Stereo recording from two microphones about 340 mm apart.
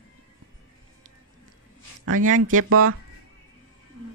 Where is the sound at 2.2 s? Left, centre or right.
Right.